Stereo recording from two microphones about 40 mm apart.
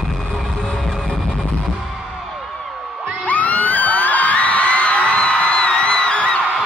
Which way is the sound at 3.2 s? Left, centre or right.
Left.